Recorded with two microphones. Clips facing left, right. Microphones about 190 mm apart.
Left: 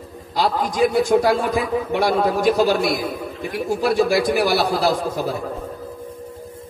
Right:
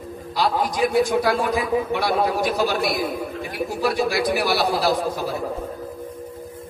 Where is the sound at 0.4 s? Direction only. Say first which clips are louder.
Left 2 dB; 50° left (ahead or behind).